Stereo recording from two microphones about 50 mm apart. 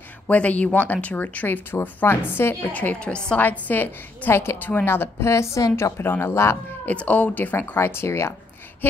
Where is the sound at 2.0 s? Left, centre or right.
Left.